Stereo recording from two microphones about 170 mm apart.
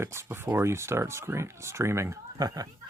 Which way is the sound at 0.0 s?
15° right (ahead or behind).